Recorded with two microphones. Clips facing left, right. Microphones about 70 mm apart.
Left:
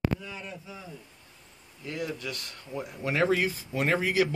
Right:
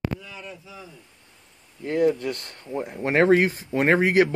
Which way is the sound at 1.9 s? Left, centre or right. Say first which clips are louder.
Right 12 dB; right.